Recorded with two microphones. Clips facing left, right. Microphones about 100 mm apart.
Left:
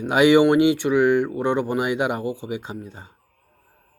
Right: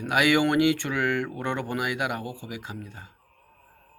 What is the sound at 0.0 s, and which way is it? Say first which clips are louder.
Speech: left 7 dB; 20° left (ahead or behind).